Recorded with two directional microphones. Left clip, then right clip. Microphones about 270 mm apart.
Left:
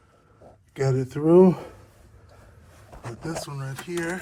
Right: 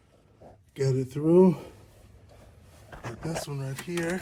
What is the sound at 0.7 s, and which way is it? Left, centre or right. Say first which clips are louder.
Speech: left 3 dB; centre.